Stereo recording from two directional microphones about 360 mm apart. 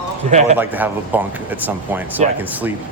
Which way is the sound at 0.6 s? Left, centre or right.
Centre.